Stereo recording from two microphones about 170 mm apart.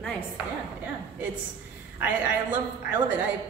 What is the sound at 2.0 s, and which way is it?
A man's voice, 10° right (ahead or behind).